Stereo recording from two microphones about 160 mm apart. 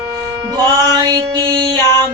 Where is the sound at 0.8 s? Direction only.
25° right (ahead or behind).